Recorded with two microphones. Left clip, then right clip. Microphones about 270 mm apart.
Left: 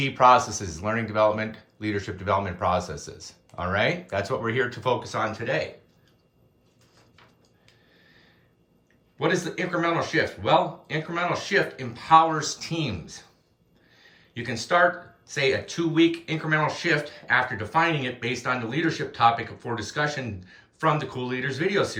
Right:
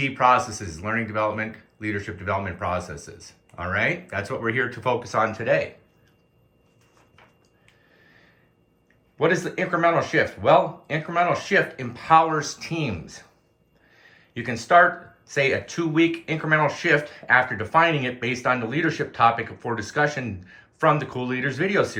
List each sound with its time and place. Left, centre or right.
0.0 s speech: centre
8.0 s snort: centre
9.1 s speech: centre
13.9 s a sound: centre
15.3 s speech: centre